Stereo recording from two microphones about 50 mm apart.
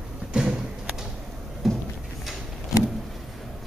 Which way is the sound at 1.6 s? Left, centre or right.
Centre.